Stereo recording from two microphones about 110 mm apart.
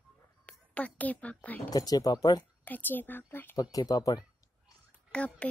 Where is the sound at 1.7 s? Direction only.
35° left (ahead or behind).